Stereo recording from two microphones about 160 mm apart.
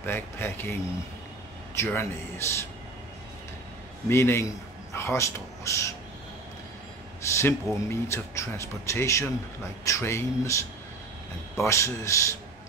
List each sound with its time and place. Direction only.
0.0 s speech: 10° left (ahead or behind)
1.8 s speech: 15° left (ahead or behind)
4.1 s speech: 15° left (ahead or behind)
7.2 s speech: 15° left (ahead or behind)